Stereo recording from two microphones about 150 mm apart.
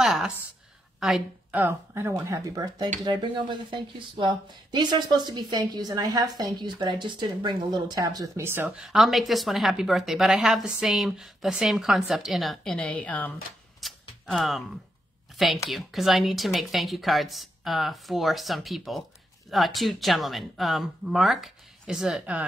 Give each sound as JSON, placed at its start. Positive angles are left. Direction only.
{"t": 0.0, "sound": "a sound", "side_deg": 0}
{"t": 0.9, "sound": "a woman's voice", "side_deg": -5}
{"t": 1.6, "sound": "speech", "side_deg": -15}
{"t": 8.6, "sound": "a woman's voice", "side_deg": -5}
{"t": 13.7, "sound": "a sound", "side_deg": 0}
{"t": 15.3, "sound": "a woman's voice", "side_deg": 0}